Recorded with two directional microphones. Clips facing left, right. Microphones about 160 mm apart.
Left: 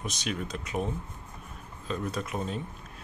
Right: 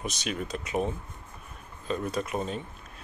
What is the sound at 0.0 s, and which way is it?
Speech, 5° right (ahead or behind).